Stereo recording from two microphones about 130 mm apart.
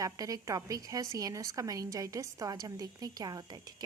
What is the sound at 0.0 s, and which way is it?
A woman's voice, 30° right (ahead or behind).